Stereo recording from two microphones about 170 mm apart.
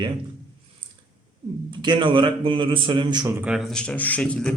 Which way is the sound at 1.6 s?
30° right (ahead or behind).